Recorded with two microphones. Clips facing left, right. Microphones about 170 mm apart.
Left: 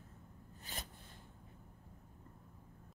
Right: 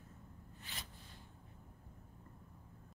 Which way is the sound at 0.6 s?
40° left (ahead or behind).